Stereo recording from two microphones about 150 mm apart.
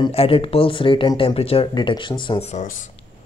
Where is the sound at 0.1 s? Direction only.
40° left (ahead or behind); by 2.8 s 55° left (ahead or behind).